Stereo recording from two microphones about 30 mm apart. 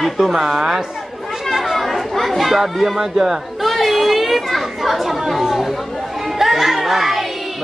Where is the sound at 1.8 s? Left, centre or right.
Centre.